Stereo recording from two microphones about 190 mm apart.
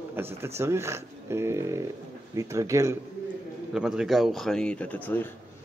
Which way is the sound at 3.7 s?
5° right (ahead or behind).